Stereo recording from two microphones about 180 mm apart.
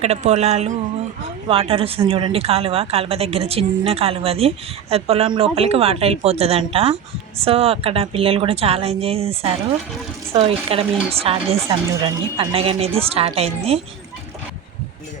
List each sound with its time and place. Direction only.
0.0 s a woman's voice: 35° right (ahead or behind)